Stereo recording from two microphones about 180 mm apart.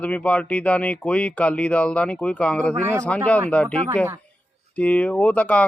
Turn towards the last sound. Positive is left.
turn(degrees=5)  # may be behind; listen again after turning